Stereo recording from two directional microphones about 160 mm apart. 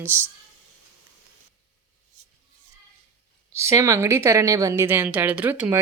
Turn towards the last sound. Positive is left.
turn(degrees=-10)  # may be behind; listen again after turning